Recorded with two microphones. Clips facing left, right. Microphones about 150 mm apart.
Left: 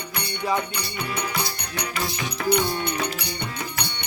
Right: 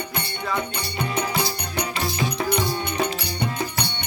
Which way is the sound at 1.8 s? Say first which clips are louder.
Right 3 dB; 50° right (ahead or behind).